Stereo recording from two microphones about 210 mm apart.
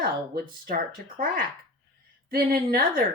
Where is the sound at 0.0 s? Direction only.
40° right (ahead or behind).